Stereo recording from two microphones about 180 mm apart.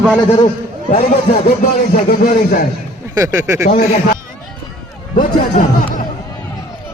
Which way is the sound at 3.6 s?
55° left (ahead or behind).